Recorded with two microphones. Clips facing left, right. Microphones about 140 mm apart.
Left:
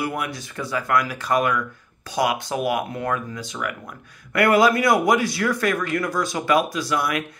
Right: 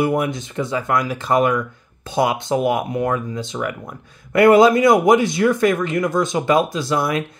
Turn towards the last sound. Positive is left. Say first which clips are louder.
# right 4 dB
turn(degrees=-25)  # may be behind; listen again after turning